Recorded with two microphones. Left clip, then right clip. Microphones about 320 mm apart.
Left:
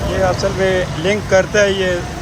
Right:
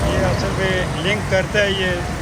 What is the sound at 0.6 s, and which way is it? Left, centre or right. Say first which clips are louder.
Speech: left 4 dB; left.